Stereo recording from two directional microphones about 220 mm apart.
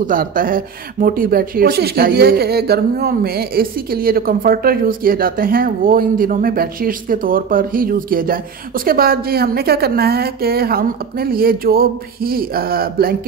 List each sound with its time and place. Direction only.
0.0 s speech: 40° right (ahead or behind)